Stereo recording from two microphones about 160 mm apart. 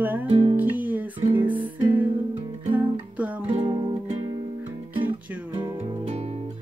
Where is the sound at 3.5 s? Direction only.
30° right (ahead or behind).